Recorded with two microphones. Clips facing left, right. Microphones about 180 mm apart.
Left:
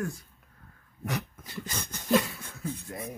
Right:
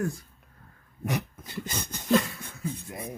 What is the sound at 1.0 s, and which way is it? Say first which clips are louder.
Speech: right 3 dB; 20° right (ahead or behind).